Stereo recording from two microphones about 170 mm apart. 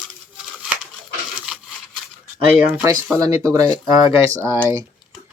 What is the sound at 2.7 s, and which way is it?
Speech, 10° right (ahead or behind).